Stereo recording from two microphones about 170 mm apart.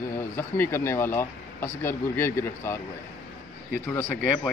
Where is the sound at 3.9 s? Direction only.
15° left (ahead or behind).